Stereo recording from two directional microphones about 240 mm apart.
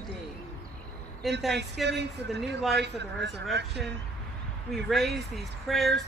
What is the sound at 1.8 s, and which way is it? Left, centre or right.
Speech, right.